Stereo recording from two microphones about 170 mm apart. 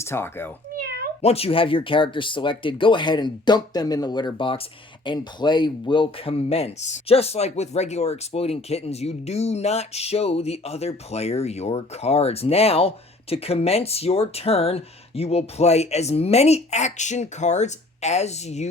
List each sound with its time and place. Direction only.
0.0 s speech: 15° left (ahead or behind)
0.8 s cat: 65° right (ahead or behind)
1.2 s speech: 35° left (ahead or behind)